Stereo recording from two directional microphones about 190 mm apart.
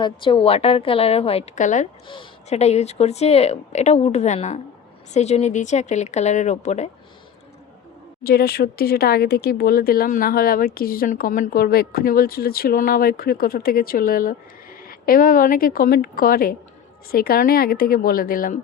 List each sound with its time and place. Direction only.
0.0 s speech: 25° left (ahead or behind)
2.0 s speech: 30° left (ahead or behind)
8.2 s speech: 55° left (ahead or behind)